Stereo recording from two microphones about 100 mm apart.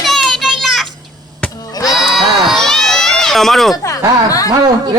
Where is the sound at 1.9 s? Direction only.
Centre (ahead or behind).